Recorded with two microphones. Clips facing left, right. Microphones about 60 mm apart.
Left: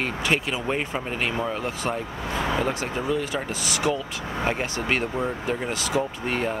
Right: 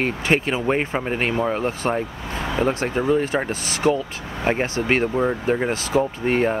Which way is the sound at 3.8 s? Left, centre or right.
Right.